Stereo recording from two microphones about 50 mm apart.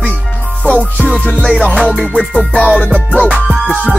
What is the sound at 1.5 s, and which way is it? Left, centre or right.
Music, centre.